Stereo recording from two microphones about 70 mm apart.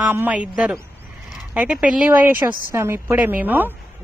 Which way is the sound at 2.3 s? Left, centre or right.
Right.